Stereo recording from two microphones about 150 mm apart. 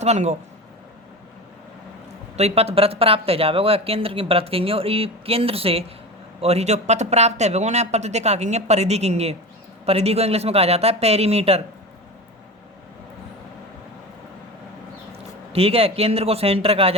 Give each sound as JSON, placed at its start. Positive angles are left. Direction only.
{"t": 0.0, "sound": "speech", "side_deg": -50}
{"t": 2.3, "sound": "speech", "side_deg": -45}
{"t": 15.5, "sound": "speech", "side_deg": -40}